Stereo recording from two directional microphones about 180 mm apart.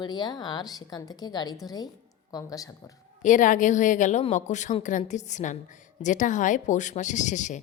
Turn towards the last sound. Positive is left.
turn(degrees=40)  # may be behind; listen again after turning